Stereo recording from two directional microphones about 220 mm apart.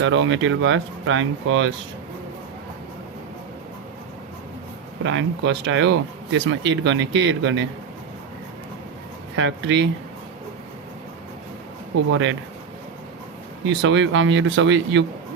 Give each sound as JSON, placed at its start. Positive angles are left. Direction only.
{"t": 0.0, "sound": "speech", "side_deg": -55}
{"t": 5.0, "sound": "speech", "side_deg": -55}
{"t": 9.3, "sound": "speech", "side_deg": -60}
{"t": 13.7, "sound": "speech", "side_deg": -60}